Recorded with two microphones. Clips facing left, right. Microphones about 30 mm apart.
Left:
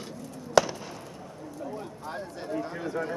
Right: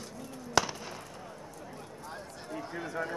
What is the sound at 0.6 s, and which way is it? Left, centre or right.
Fireworks, centre.